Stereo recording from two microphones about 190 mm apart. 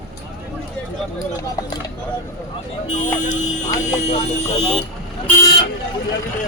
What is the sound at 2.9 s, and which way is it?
Speech, 40° left (ahead or behind).